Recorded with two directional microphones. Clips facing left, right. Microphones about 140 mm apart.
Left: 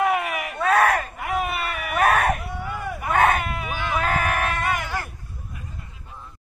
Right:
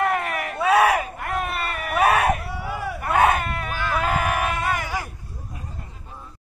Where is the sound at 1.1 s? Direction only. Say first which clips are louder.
Left 1 dB; 5° left (ahead or behind).